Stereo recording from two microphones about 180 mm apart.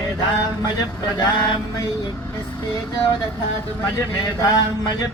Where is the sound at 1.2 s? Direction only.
25° left (ahead or behind).